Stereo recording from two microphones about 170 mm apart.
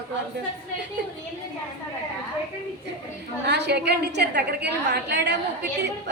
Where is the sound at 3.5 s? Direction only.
80° right.